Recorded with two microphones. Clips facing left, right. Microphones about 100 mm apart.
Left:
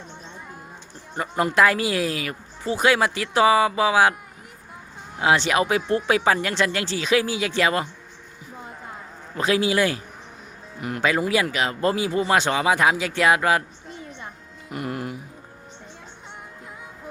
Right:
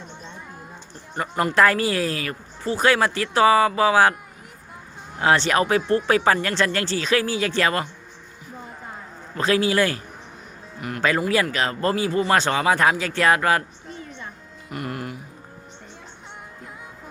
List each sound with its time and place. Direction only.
1.1 s speech: 15° left (ahead or behind)
5.1 s speech: 10° left (ahead or behind)
9.3 s speech: 10° left (ahead or behind)
10.8 s music: 20° left (ahead or behind)
11.2 s speech: 15° left (ahead or behind)
14.7 s music: 20° left (ahead or behind)